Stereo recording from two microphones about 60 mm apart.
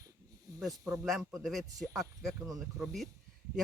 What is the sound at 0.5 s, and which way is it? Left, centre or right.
Snake, right.